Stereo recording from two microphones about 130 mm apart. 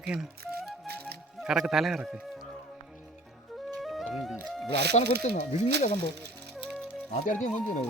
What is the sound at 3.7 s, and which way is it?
Music, centre (ahead or behind).